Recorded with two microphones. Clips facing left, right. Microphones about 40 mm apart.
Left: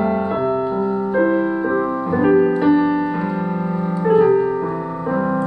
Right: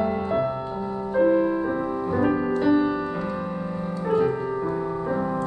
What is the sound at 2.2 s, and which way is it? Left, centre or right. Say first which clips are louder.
Music: left 9 dB; left.